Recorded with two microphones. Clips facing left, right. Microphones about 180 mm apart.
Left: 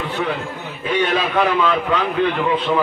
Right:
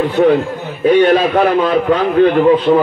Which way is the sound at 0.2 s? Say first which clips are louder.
Right 13 dB; 35° right (ahead or behind).